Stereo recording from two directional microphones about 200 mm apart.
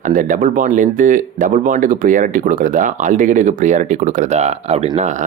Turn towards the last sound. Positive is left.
turn(degrees=-35)  # may be behind; listen again after turning